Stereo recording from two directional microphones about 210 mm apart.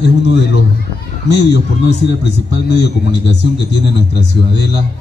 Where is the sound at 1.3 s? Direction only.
55° left (ahead or behind).